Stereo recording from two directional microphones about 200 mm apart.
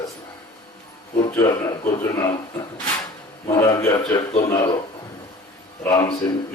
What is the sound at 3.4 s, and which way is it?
Speech, 15° left (ahead or behind).